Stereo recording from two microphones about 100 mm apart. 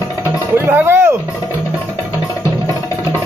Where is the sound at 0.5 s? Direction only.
25° right (ahead or behind).